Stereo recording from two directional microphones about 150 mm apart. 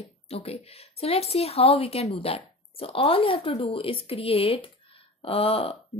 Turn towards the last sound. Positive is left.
turn(degrees=40)  # may be behind; listen again after turning